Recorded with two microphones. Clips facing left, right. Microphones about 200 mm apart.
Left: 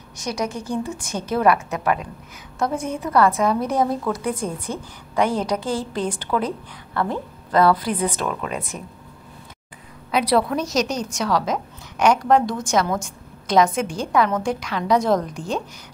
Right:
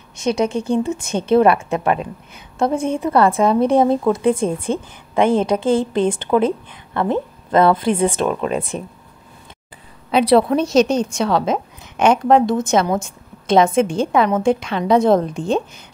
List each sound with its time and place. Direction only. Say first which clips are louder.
0.2 s a woman's voice: right 8 dB; 25° right (ahead or behind)
10.1 s a woman's voice: right 6 dB; 25° right (ahead or behind)